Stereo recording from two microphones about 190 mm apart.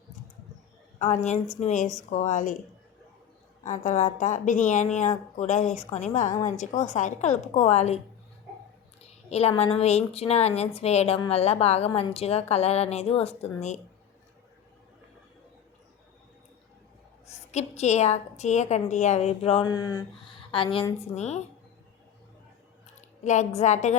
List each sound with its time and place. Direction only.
0.9 s a woman's voice: 40° left (ahead or behind)
3.6 s a woman's voice: 40° left (ahead or behind)
9.0 s a sound: 35° left (ahead or behind)
9.7 s a woman's voice: 35° left (ahead or behind)
17.5 s a woman's voice: 35° left (ahead or behind)
23.0 s a sound: 40° left (ahead or behind)
23.6 s a woman's voice: 40° left (ahead or behind)